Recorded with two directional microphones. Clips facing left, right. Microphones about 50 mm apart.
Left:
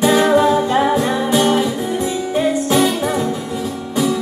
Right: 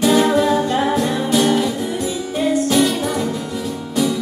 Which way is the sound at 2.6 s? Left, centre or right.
Centre.